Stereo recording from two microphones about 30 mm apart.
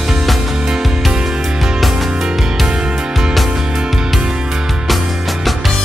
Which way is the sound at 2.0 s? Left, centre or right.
Right.